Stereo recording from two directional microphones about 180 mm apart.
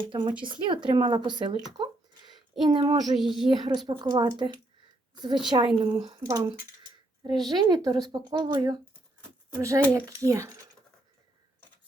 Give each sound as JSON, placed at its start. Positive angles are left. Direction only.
{"t": 0.1, "sound": "speech", "side_deg": -25}
{"t": 2.3, "sound": "a sound", "side_deg": -25}
{"t": 3.0, "sound": "speech", "side_deg": 0}
{"t": 3.5, "sound": "speech", "side_deg": -25}